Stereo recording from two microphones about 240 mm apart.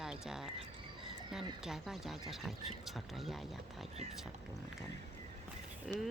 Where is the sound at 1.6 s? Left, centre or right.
Centre.